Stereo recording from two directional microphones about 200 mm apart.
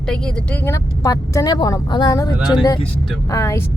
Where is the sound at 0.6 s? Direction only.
15° left (ahead or behind).